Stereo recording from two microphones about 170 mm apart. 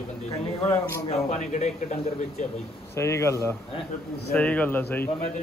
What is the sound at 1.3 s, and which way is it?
Speech, 45° left (ahead or behind).